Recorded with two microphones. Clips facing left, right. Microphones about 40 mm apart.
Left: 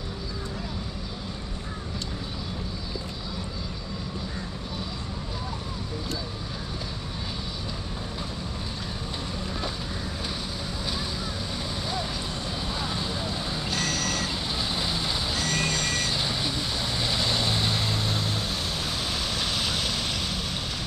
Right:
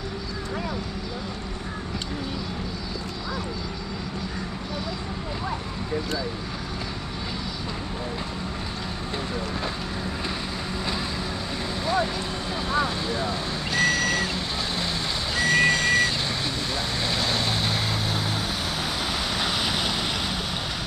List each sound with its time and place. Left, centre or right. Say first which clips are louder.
12.6 s vehicle: right 8 dB; centre
13.7 s reversing beeps: right 8 dB; centre
15.3 s vehicle: right 10 dB; centre
16.1 s vehicle: right 1 dB; centre
19.3 s waves: right 3 dB; centre